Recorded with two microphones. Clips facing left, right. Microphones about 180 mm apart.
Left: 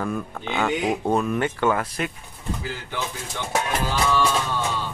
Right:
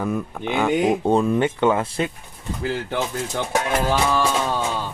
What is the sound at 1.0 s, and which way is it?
Speech, 25° right (ahead or behind).